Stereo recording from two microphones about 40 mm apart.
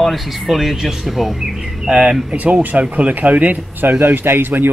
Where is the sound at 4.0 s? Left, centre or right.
Right.